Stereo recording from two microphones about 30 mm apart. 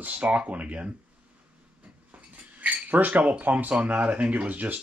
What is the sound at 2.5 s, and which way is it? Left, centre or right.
Cutlery, right.